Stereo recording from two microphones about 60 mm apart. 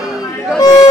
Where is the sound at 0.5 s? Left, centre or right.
Left.